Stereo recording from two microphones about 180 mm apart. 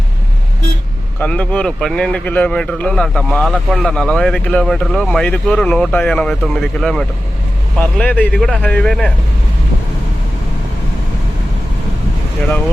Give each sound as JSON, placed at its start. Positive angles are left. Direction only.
{"t": 1.2, "sound": "speech", "side_deg": 5}